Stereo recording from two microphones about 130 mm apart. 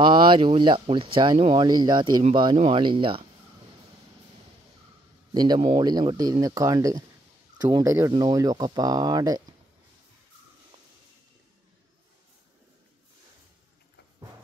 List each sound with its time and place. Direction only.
0.0 s speech: 40° right (ahead or behind)
2.5 s speech: 55° right (ahead or behind)
2.8 s speech: 40° right (ahead or behind)
5.3 s speech: 35° right (ahead or behind)
8.1 s speech: 30° right (ahead or behind)